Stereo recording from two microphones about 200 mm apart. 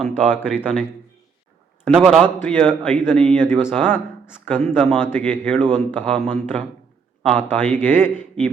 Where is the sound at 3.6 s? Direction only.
5° right (ahead or behind).